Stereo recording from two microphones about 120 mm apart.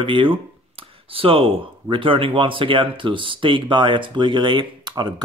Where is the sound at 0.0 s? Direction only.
45° right (ahead or behind).